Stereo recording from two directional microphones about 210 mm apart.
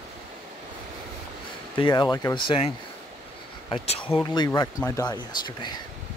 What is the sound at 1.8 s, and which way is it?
Speech, 20° left (ahead or behind).